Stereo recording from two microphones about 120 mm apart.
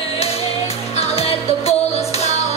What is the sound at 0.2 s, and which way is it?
Music, 55° left (ahead or behind).